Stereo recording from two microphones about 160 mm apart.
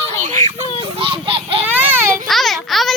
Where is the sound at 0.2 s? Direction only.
50° right (ahead or behind).